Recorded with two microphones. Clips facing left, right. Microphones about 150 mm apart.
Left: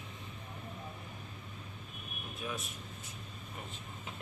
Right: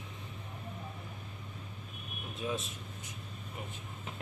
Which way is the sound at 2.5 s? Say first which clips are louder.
Right 6 dB; 25° right (ahead or behind).